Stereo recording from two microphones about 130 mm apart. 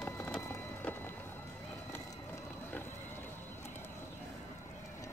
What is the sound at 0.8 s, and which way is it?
Music, 15° left (ahead or behind).